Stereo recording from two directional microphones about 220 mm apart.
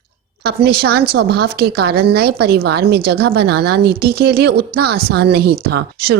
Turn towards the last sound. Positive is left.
turn(degrees=-45)  # may be behind; listen again after turning